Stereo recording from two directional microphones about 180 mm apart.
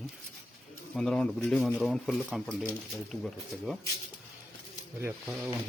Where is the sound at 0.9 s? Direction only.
5° left (ahead or behind).